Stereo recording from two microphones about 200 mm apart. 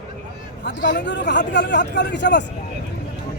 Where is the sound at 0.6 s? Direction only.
60° left (ahead or behind).